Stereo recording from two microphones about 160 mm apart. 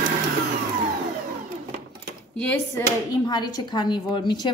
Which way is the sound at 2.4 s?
10° left (ahead or behind).